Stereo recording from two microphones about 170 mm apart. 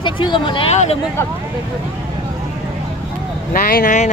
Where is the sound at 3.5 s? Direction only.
55° left (ahead or behind).